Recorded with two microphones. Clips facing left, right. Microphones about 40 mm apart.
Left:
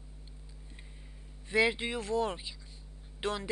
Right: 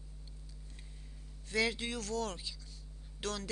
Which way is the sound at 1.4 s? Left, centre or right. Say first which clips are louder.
Left 5 dB; left.